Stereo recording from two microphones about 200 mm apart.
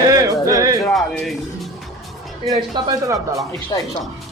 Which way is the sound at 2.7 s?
20° right (ahead or behind).